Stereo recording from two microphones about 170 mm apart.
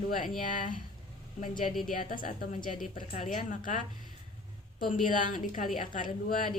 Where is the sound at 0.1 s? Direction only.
50° left (ahead or behind).